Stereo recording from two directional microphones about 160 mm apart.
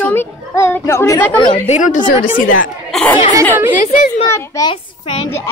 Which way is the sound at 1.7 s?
50° left (ahead or behind).